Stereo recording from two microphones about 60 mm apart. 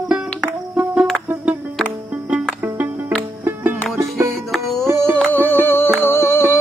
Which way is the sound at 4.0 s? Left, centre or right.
Right.